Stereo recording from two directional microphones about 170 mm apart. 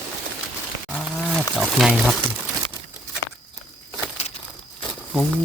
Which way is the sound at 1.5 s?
Centre (ahead or behind).